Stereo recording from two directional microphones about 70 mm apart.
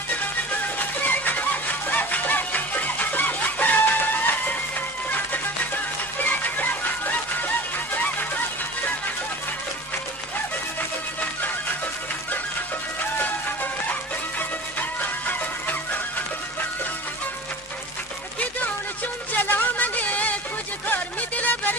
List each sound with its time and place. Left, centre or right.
0.8 s music: left
3.0 s chicken: left
5.1 s music: left
15.3 s music: left
19.4 s music: left